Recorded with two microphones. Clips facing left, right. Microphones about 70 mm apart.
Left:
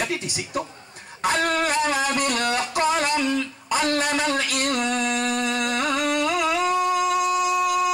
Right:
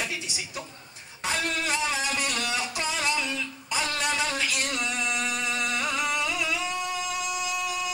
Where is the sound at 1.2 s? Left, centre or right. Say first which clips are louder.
Left 7 dB; left.